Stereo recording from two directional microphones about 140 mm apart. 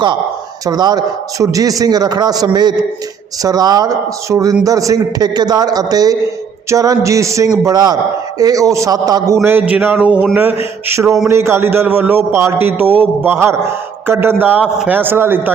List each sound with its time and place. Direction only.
0.6 s a man's voice: 30° right (ahead or behind)